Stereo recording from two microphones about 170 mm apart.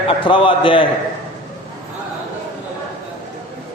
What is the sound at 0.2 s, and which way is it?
Speech, 30° left (ahead or behind).